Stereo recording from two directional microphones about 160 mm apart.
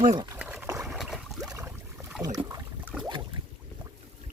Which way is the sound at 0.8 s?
Centre (ahead or behind).